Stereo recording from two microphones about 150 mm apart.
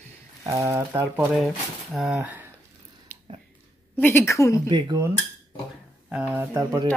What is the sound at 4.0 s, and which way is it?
Speech, 15° left (ahead or behind).